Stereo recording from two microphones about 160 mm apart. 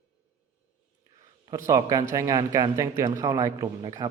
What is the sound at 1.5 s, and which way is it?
Speech, 20° right (ahead or behind).